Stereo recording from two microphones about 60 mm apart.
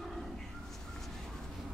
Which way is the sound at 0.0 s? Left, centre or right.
Centre.